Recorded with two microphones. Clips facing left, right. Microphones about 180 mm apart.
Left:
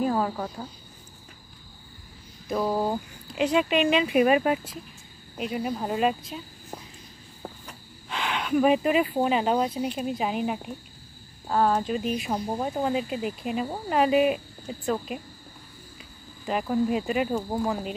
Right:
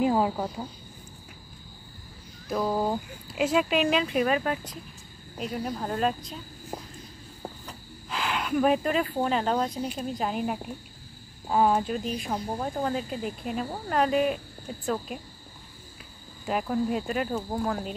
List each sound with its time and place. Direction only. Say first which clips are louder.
0.0 s speech: right 2 dB; 15° right (ahead or behind)
2.4 s speech: left 1 dB; 5° left (ahead or behind)
4.1 s speech: left 5 dB; 15° left (ahead or behind)
6.7 s walk: right 3 dB; 10° right (ahead or behind)
8.1 s speech: left 2 dB; centre (ahead or behind)
12.0 s speech: left 3 dB; 5° left (ahead or behind)
16.4 s speech: left 2 dB; centre (ahead or behind)